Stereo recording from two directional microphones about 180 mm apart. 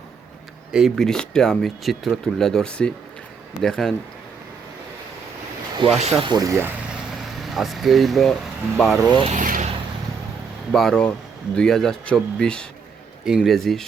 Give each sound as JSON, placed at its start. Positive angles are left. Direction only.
{"t": 0.7, "sound": "speech", "side_deg": 0}
{"t": 6.0, "sound": "speech", "side_deg": -35}
{"t": 6.3, "sound": "speech", "side_deg": -20}
{"t": 6.8, "sound": "vehicle", "side_deg": -5}
{"t": 8.8, "sound": "speech", "side_deg": 0}
{"t": 9.2, "sound": "speech", "side_deg": -45}
{"t": 10.7, "sound": "speech", "side_deg": 0}